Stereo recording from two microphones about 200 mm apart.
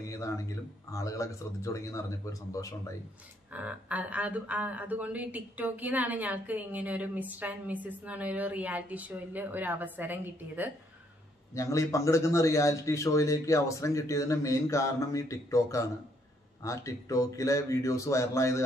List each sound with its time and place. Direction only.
0.1 s a man's voice: 15° left (ahead or behind)
3.5 s speech: 5° right (ahead or behind)
11.5 s a man's voice: 15° left (ahead or behind)